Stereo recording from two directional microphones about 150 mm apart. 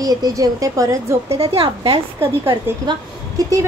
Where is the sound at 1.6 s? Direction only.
35° right (ahead or behind).